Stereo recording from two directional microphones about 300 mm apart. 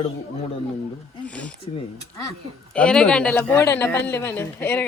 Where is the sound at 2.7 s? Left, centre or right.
Centre.